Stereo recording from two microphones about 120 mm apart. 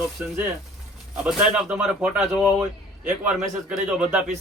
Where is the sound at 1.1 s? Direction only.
10° right (ahead or behind).